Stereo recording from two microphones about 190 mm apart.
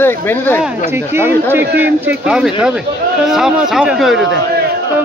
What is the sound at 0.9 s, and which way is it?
A man's voice, 10° right (ahead or behind).